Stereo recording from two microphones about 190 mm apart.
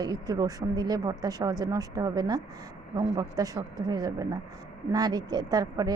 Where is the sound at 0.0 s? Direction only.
20° right (ahead or behind).